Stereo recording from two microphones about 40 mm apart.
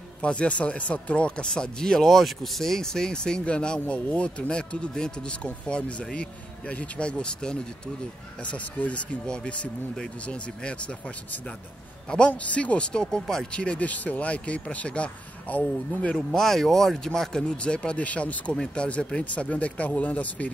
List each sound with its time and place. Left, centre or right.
0.2 s speech: left
2.0 s speech: centre; by 7.5 s left
8.5 s speech: left
9.2 s speech: left
12.3 s speech: left; by 13.4 s centre
13.5 s speech: left
13.8 s speech: left
16.3 s speech: centre; by 20.5 s left